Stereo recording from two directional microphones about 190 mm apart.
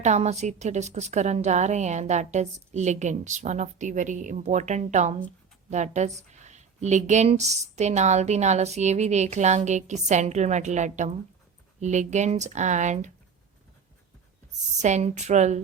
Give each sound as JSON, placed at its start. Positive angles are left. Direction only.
{"t": 0.0, "sound": "a woman's voice", "side_deg": -35}
{"t": 14.8, "sound": "a woman's voice", "side_deg": -40}